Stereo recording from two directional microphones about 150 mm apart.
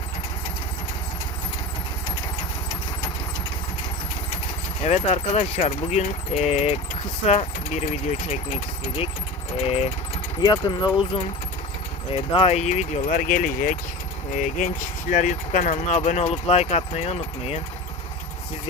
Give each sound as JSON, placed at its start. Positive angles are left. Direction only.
{"t": 4.8, "sound": "speech", "side_deg": 45}
{"t": 10.4, "sound": "speech", "side_deg": 30}